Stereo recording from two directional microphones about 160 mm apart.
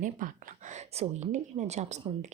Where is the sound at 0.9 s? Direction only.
40° right (ahead or behind).